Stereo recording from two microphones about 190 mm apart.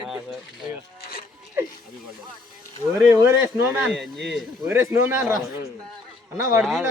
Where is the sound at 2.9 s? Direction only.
15° right (ahead or behind).